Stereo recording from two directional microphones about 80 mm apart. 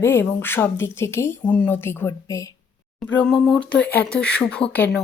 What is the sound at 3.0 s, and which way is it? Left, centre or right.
Speech, centre.